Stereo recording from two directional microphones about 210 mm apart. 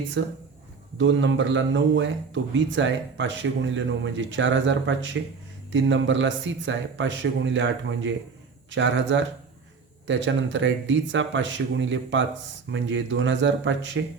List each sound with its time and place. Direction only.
0.2 s a man's voice: 65° right (ahead or behind)